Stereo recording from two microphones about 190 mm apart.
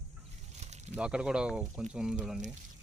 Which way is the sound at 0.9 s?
5° right (ahead or behind).